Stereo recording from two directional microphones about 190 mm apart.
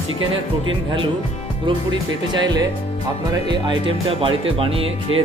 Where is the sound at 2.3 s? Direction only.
25° right (ahead or behind).